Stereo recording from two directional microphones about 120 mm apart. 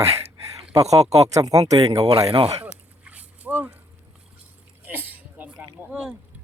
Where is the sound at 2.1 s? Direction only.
55° right (ahead or behind).